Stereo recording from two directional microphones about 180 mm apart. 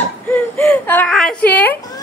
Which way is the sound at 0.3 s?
10° left (ahead or behind).